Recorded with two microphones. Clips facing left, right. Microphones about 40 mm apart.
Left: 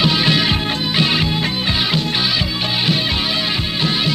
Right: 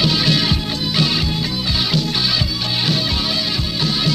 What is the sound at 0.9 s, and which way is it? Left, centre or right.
Music, left.